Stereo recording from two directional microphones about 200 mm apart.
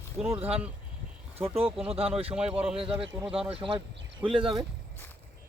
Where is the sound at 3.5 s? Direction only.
25° right (ahead or behind).